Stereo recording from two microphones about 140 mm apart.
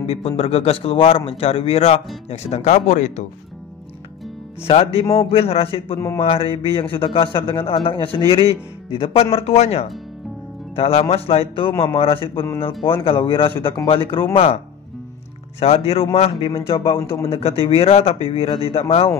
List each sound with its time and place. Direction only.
0.0 s a man's voice: 45° left (ahead or behind)
4.6 s a man's voice: 45° left (ahead or behind)
5.9 s speech: 20° left (ahead or behind)
6.2 s a man's voice: 40° left (ahead or behind)
15.6 s a man's voice: 45° left (ahead or behind)